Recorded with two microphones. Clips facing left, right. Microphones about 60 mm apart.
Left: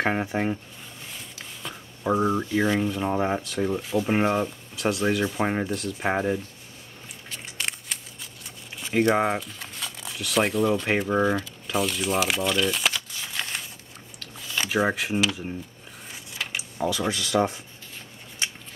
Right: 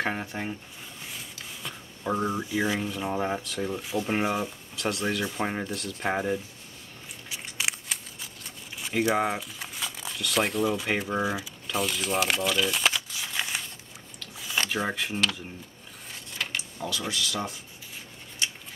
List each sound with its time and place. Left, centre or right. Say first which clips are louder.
0.1 s speech: left 7 dB; left
1.0 s a sound: even; centre
2.0 s speech: left 5 dB; centre
2.4 s speech: left 4 dB; centre
7.5 s a sound: right 1 dB; centre
9.4 s speech: even; centre
11.6 s crumpling: left 2 dB; centre
14.6 s speech: left 5 dB; centre
16.1 s a sound: even; centre
17.1 s speech: left 7 dB; left